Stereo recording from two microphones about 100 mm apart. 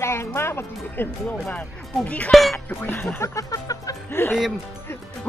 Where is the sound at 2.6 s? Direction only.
20° left (ahead or behind).